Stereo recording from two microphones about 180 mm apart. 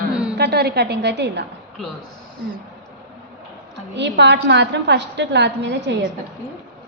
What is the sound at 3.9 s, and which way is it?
A woman's voice, 75° right (ahead or behind).